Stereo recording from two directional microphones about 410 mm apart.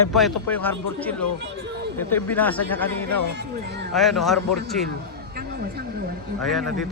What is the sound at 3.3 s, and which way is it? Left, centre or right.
Speech, right.